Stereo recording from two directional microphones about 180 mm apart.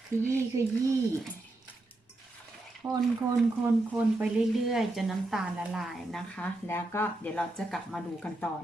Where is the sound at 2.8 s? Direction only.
20° right (ahead or behind).